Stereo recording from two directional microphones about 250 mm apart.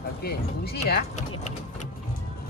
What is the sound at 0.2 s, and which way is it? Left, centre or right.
Speech, left.